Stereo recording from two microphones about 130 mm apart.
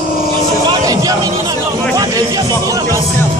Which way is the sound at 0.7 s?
30° right (ahead or behind).